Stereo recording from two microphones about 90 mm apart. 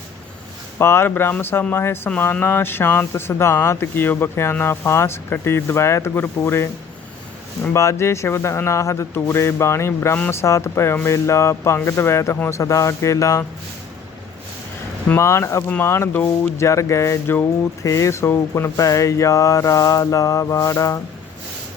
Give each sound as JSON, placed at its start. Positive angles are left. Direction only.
{"t": 0.8, "sound": "speech", "side_deg": 25}
{"t": 7.7, "sound": "speech", "side_deg": 30}
{"t": 15.1, "sound": "speech", "side_deg": 30}